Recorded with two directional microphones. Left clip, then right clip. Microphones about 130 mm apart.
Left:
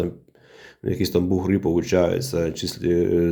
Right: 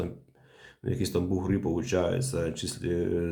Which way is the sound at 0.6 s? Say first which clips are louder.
Left 8 dB; 45° left (ahead or behind).